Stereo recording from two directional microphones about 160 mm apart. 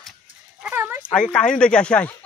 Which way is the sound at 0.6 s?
10° right (ahead or behind).